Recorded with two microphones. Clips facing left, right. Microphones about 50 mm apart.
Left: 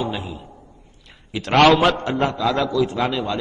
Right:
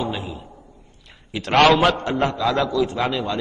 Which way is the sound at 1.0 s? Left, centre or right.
Centre.